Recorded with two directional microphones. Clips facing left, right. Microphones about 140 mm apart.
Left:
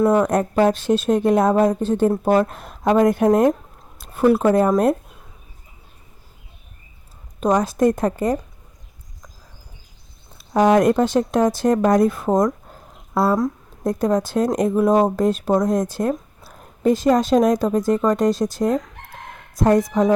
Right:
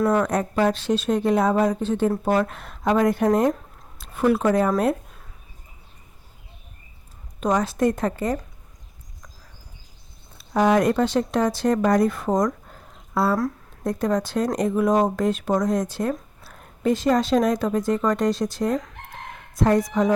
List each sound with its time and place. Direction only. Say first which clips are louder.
0.0 s speech: left 4 dB; 20° left (ahead or behind)
0.3 s speech: left 4 dB; 40° left (ahead or behind)
7.3 s speech: left 4 dB; 40° left (ahead or behind)
10.5 s speech: left 4 dB; 45° left (ahead or behind)
12.2 s a sound: left 4 dB; 30° left (ahead or behind)
13.8 s speech: left 4 dB; 40° left (ahead or behind)